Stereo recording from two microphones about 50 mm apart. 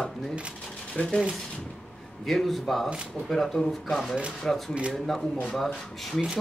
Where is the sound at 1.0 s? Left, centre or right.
Left.